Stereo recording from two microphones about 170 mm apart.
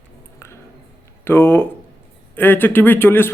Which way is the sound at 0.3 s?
15° left (ahead or behind).